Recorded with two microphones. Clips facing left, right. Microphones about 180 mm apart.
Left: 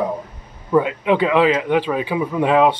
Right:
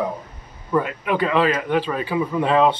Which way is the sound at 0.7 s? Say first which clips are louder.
Left 5 dB; 20° left (ahead or behind).